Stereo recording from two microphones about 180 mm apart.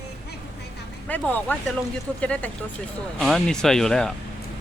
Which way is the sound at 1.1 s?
10° left (ahead or behind).